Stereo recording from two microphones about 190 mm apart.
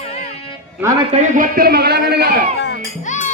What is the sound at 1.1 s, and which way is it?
A man's voice, 40° right (ahead or behind).